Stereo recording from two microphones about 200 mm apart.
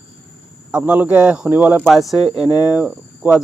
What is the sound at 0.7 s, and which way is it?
Speech, 5° right (ahead or behind).